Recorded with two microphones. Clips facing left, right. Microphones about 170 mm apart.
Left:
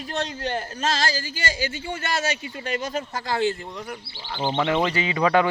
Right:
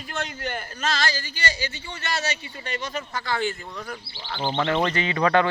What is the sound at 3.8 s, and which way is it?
Speech, 10° left (ahead or behind).